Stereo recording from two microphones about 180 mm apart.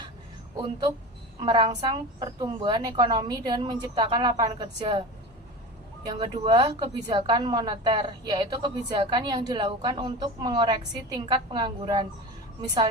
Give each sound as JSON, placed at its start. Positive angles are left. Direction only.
{"t": 1.4, "sound": "a woman's voice", "side_deg": -25}
{"t": 6.1, "sound": "a woman's voice", "side_deg": -25}